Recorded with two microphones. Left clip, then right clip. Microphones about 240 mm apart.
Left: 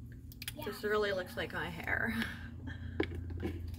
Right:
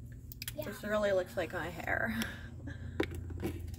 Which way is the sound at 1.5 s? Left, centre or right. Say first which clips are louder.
Right 1 dB; centre.